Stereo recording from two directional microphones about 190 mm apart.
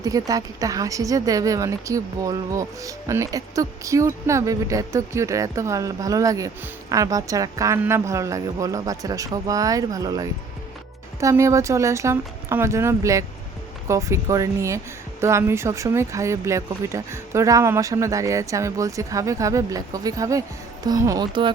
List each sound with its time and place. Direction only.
0.0 s a woman's voice: 20° right (ahead or behind)